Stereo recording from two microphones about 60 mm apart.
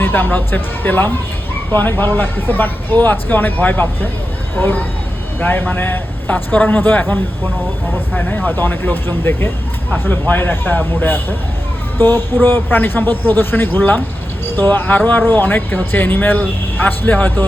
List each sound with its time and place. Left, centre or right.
0.0 s a man's voice: left
8.1 s a man's voice: left